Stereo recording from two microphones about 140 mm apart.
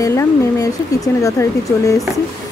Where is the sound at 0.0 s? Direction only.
20° left (ahead or behind).